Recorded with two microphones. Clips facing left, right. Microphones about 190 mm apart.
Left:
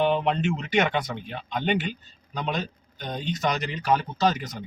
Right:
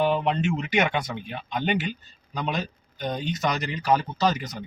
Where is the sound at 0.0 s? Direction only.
Centre (ahead or behind).